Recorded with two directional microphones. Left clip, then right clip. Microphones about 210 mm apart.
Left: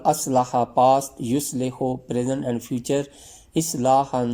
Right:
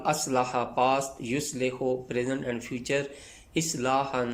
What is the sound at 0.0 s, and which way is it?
Speech, 30° left (ahead or behind).